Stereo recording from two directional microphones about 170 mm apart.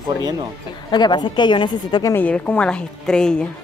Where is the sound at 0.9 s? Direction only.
25° left (ahead or behind).